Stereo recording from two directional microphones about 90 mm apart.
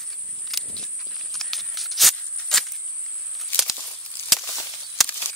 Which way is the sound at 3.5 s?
20° left (ahead or behind).